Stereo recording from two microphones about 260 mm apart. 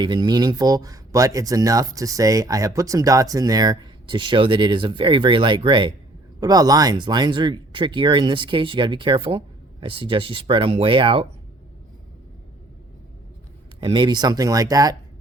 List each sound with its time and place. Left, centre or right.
0.0 s speech: centre
13.8 s speech: centre